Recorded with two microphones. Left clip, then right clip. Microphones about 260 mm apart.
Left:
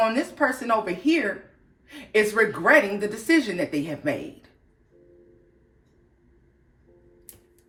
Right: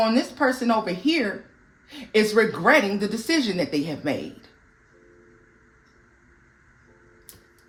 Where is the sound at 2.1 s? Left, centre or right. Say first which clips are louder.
Right 1 dB; right.